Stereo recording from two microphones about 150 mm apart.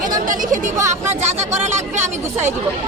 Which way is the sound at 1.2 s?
50° right (ahead or behind).